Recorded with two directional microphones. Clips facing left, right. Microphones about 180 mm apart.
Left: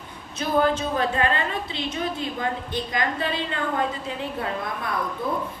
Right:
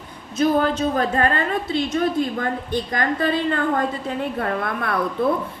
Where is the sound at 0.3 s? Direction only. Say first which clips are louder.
Right 3 dB; 40° right (ahead or behind).